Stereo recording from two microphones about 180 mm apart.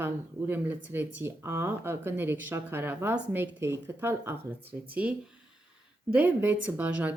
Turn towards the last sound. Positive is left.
turn(degrees=-10)  # may be behind; listen again after turning